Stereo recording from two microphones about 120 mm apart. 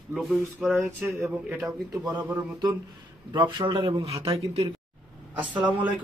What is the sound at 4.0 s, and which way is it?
Speech, 55° right (ahead or behind).